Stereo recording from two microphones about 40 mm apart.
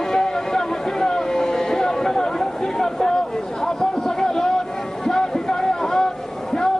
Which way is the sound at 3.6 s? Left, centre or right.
Centre.